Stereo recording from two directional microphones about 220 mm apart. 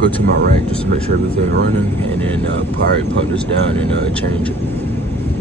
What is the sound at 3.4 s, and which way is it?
Speech, 5° left (ahead or behind).